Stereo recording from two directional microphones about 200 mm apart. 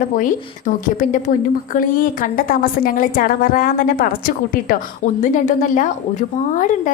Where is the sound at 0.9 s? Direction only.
40° left (ahead or behind).